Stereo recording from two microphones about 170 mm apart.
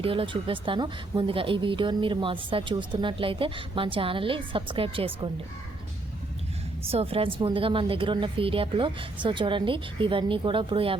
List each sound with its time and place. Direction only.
0.0 s speech: 30° right (ahead or behind)
6.8 s speech: 35° right (ahead or behind)